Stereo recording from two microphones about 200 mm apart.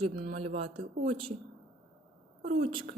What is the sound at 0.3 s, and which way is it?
Speech, 30° right (ahead or behind).